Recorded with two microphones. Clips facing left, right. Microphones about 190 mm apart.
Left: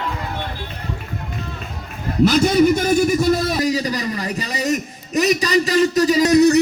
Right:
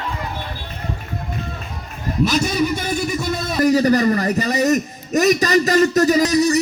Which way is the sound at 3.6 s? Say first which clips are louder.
Right 6 dB; 55° right (ahead or behind).